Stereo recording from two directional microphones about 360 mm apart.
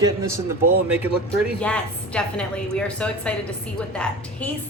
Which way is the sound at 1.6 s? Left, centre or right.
Centre.